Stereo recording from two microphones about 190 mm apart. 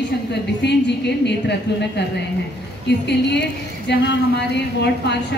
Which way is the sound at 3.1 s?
65° left (ahead or behind).